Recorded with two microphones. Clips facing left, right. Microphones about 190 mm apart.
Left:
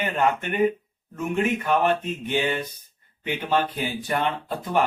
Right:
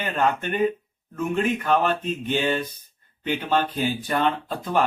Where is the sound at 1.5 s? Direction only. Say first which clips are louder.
Even; 15° left (ahead or behind).